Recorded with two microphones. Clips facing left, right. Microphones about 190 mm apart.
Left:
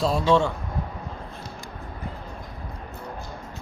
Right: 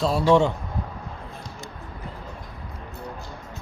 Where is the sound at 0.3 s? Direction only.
15° right (ahead or behind).